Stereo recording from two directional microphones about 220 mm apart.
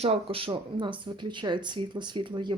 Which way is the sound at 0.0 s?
25° right (ahead or behind).